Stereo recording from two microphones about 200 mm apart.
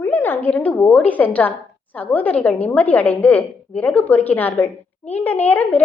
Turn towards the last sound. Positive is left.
turn(degrees=10)  # may be behind; listen again after turning